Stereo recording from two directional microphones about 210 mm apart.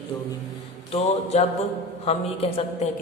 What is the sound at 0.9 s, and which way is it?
A man's voice, 30° left (ahead or behind).